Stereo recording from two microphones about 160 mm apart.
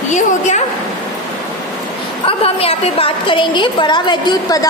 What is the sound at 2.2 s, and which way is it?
A woman's voice, 35° left (ahead or behind).